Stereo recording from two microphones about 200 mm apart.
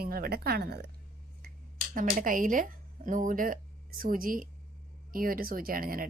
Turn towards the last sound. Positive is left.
turn(degrees=-45)  # may be behind; listen again after turning